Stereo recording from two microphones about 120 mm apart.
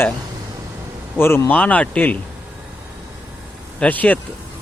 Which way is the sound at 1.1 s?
20° left (ahead or behind).